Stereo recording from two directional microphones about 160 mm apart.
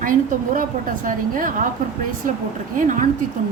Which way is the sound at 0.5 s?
55° right (ahead or behind).